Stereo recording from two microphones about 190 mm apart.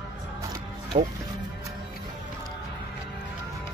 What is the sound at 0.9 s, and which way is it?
Speech, 35° right (ahead or behind).